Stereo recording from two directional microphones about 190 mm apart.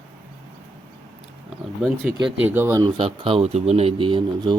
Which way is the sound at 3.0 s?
30° right (ahead or behind).